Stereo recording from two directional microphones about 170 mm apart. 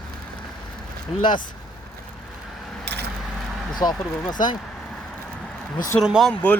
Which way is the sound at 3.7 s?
25° left (ahead or behind).